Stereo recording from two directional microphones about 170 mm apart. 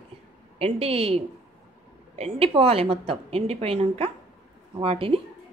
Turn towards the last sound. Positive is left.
turn(degrees=-35)  # may be behind; listen again after turning